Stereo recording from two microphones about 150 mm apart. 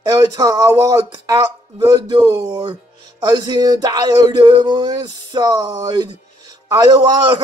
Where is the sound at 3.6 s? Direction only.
25° right (ahead or behind).